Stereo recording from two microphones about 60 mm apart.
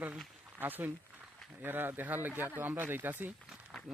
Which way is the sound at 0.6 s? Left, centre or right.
Right.